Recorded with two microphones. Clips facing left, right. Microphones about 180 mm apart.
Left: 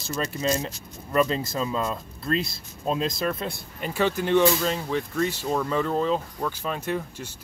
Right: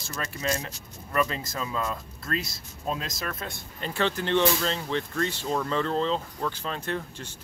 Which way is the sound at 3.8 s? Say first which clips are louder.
Left 3 dB; 10° left (ahead or behind).